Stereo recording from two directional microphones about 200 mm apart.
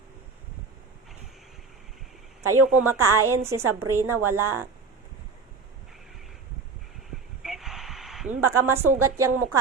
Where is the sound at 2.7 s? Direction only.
10° right (ahead or behind).